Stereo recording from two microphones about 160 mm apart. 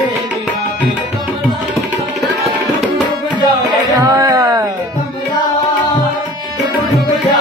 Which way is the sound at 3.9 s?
20° right (ahead or behind).